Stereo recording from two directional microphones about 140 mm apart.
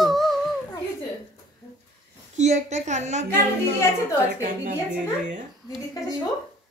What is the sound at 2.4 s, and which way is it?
Speech, 55° right (ahead or behind).